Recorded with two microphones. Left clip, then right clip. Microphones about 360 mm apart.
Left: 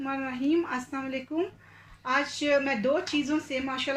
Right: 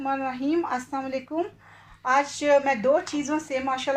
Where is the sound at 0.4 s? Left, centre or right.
Centre.